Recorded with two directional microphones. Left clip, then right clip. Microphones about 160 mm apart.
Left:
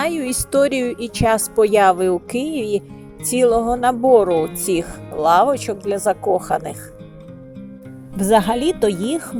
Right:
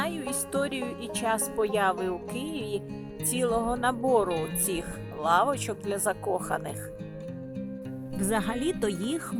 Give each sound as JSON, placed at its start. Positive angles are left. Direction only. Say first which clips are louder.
{"t": 0.0, "sound": "speech", "louder": "left 10 dB", "side_deg": 20}
{"t": 8.1, "sound": "speech", "louder": "left 14 dB", "side_deg": 15}